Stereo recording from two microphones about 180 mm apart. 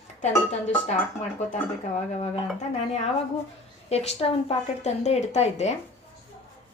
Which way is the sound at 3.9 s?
35° left (ahead or behind).